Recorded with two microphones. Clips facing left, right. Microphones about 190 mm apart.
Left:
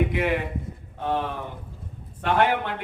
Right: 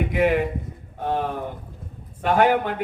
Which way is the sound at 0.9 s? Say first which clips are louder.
Right 2 dB; 45° right (ahead or behind).